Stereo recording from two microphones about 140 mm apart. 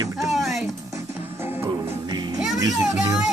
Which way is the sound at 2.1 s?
30° right (ahead or behind).